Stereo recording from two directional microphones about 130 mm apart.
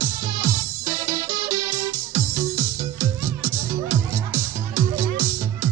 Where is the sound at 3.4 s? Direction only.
15° right (ahead or behind).